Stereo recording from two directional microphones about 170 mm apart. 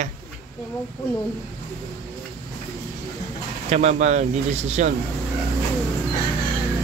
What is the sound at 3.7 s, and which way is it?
Speech, 40° right (ahead or behind).